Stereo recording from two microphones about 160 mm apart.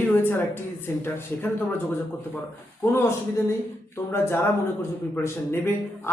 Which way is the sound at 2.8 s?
15° left (ahead or behind).